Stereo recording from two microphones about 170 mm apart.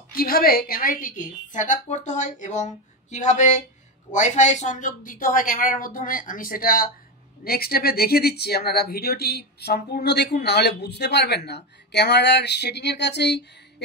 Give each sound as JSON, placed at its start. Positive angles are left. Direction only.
{"t": 0.1, "sound": "a woman's voice", "side_deg": 60}